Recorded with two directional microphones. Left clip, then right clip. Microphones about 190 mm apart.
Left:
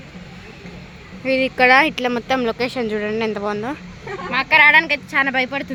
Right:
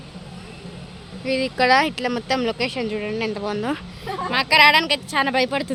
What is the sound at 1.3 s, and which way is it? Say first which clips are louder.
Speech: left 4 dB; 5° left (ahead or behind).